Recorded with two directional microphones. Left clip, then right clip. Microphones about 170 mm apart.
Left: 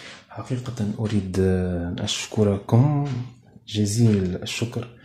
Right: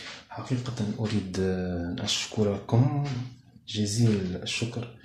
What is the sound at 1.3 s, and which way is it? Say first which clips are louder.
Speech: left 8 dB; 50° left (ahead or behind).